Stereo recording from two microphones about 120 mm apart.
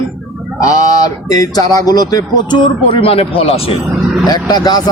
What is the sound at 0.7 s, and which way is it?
Speech, 30° left (ahead or behind).